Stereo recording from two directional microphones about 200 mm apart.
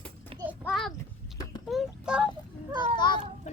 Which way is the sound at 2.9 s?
20° left (ahead or behind).